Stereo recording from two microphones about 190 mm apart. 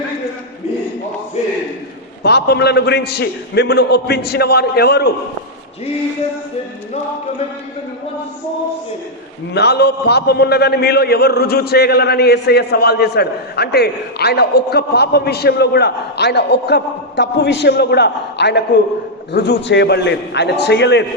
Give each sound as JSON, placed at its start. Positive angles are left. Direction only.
{"t": 2.2, "sound": "a man's voice", "side_deg": 60}
{"t": 9.6, "sound": "a man's voice", "side_deg": 60}